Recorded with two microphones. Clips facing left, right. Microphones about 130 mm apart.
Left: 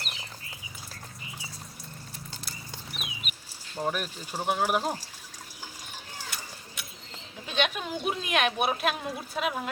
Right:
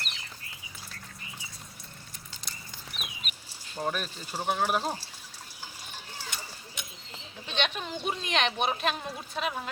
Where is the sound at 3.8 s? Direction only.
10° left (ahead or behind).